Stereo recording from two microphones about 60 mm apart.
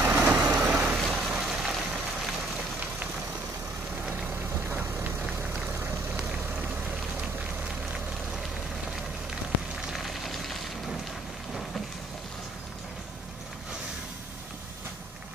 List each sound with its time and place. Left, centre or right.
0.0 s vehicle: right
0.7 s rain: centre
5.2 s vehicle: centre
9.8 s vehicle: centre